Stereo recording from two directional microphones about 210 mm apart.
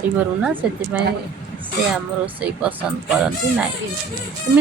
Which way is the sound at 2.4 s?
5° right (ahead or behind).